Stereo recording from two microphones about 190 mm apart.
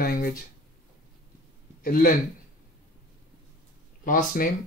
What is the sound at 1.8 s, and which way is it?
Speech, 50° left (ahead or behind).